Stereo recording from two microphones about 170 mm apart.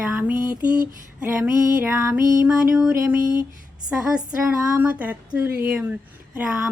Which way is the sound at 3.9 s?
5° right (ahead or behind).